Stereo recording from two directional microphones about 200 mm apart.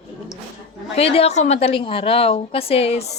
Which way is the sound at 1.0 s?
30° left (ahead or behind).